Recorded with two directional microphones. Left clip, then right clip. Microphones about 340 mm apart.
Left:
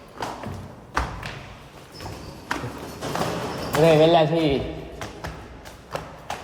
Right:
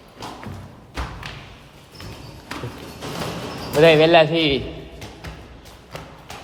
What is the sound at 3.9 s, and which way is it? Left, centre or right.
Speech, right.